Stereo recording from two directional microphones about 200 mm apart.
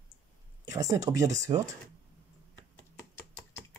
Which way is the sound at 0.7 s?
15° right (ahead or behind).